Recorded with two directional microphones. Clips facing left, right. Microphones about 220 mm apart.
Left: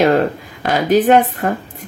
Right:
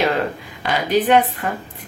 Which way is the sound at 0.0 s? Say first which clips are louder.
Left 6 dB; 45° left (ahead or behind).